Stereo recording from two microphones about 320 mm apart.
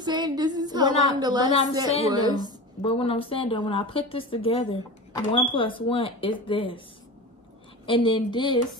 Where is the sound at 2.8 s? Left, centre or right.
Centre.